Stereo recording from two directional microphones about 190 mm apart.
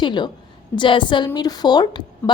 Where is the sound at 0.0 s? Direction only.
25° left (ahead or behind).